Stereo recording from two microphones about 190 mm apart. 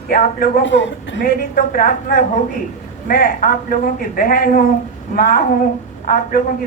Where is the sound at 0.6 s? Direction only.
70° left (ahead or behind).